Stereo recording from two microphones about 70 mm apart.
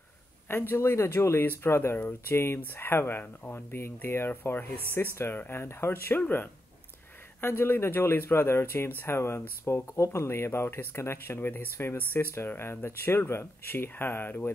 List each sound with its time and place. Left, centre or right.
0.5 s speech: left
12.1 s speech: left